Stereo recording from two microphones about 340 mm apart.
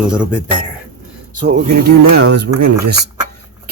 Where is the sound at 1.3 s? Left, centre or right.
Right.